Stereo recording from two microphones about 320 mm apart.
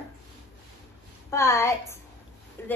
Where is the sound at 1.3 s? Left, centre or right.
Centre.